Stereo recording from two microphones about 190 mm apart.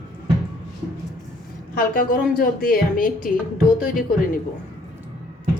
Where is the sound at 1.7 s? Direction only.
50° left (ahead or behind).